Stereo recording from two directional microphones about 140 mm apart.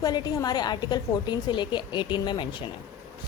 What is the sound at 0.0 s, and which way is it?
A woman's voice, 30° left (ahead or behind).